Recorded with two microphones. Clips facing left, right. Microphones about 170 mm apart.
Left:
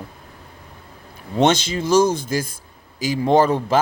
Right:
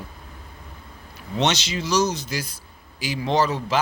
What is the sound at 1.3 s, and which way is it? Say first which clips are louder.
Speech: left 6 dB; 50° left (ahead or behind).